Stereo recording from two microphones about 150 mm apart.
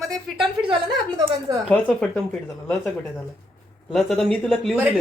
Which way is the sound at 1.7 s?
10° left (ahead or behind).